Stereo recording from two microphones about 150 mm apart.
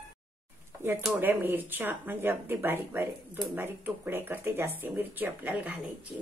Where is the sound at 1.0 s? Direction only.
10° right (ahead or behind).